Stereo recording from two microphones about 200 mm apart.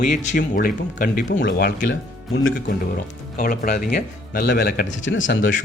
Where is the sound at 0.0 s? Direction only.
40° left (ahead or behind).